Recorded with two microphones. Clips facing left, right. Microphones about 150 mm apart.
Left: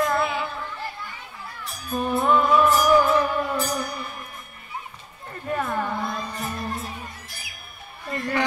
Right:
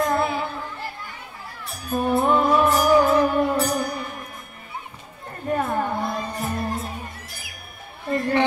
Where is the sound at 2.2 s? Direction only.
30° right (ahead or behind).